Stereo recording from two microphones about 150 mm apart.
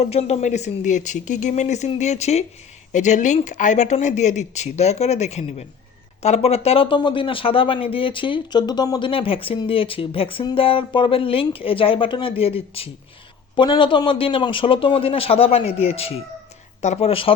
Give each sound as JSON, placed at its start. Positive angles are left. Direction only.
{"t": 0.0, "sound": "speech", "side_deg": 45}